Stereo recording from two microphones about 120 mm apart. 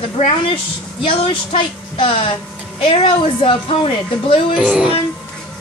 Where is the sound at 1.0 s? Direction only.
45° left (ahead or behind).